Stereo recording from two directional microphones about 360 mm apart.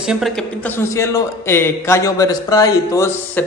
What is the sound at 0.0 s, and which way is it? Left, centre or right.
A man's voice, centre.